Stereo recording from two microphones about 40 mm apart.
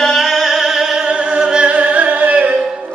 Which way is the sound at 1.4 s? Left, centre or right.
Right.